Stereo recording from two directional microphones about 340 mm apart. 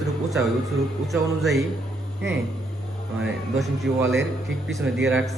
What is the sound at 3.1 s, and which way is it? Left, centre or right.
A man's voice, centre.